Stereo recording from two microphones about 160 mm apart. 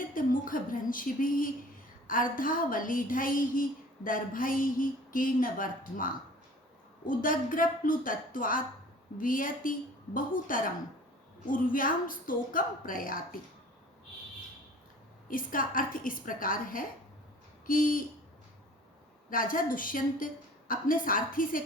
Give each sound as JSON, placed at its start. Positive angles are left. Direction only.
{"t": 0.1, "sound": "a woman's voice", "side_deg": 60}
{"t": 15.3, "sound": "a woman's voice", "side_deg": 60}
{"t": 19.3, "sound": "a woman's voice", "side_deg": 60}